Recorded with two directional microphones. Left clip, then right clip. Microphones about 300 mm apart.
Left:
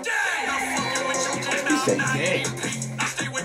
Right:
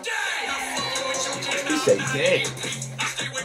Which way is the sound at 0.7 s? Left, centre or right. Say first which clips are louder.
Left 2 dB; left.